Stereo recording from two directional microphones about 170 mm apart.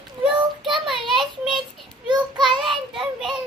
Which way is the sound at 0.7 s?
Centre (ahead or behind).